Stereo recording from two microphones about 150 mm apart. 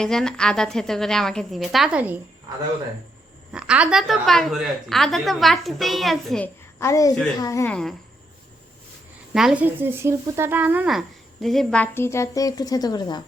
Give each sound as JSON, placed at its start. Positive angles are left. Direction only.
{"t": 0.0, "sound": "speech", "side_deg": 5}
{"t": 3.5, "sound": "speech", "side_deg": -5}
{"t": 6.7, "sound": "a woman's voice", "side_deg": 20}
{"t": 7.7, "sound": "speech", "side_deg": 5}
{"t": 9.3, "sound": "speech", "side_deg": -5}
{"t": 9.6, "sound": "speech", "side_deg": -15}